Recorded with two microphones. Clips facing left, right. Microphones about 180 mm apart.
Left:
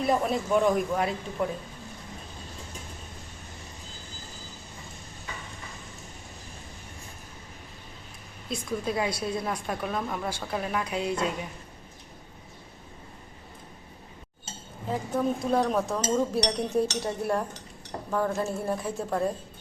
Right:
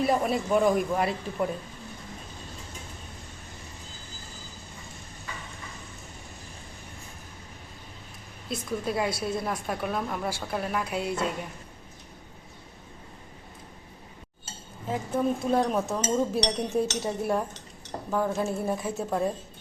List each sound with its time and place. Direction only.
0.0 s a woman's voice: centre (ahead or behind)
8.4 s a woman's voice: centre (ahead or behind)
14.8 s a woman's voice: 5° right (ahead or behind)